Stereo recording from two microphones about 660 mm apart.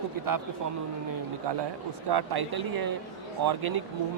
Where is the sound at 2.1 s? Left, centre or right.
Right.